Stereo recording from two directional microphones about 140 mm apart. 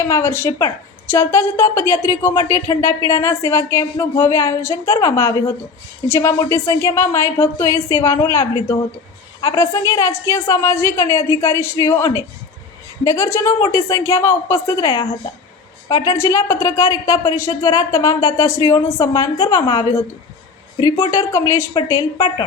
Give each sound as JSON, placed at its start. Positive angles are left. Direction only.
{"t": 0.0, "sound": "a woman's voice", "side_deg": 20}